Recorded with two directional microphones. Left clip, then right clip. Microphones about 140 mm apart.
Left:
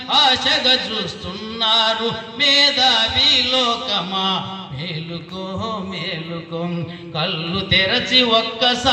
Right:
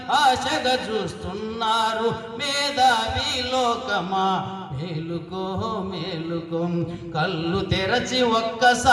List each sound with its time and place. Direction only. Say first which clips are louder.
0.1 s music: left 4 dB; 45° right (ahead or behind)
7.2 s music: left 2 dB; 45° right (ahead or behind)